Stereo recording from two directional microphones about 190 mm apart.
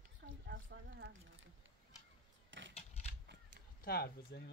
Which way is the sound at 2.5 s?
80° right.